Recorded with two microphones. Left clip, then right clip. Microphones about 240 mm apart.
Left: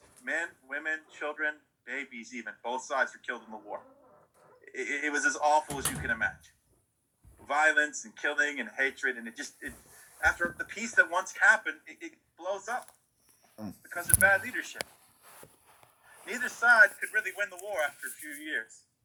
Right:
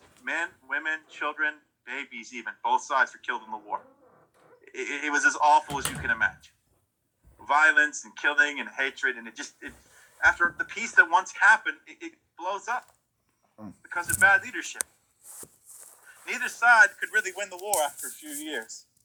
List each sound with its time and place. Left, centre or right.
0.3 s a sound: centre
1.1 s speech: centre
13.8 s speech: centre
16.2 s speech: centre; by 17.6 s right
17.7 s speech: centre
18.3 s speech: centre